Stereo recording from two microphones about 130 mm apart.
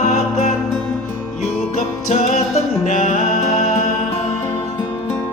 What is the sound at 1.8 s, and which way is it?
Music, 70° left (ahead or behind).